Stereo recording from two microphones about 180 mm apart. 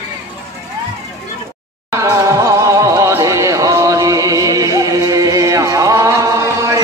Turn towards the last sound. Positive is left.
turn(degrees=-20)  # may be behind; listen again after turning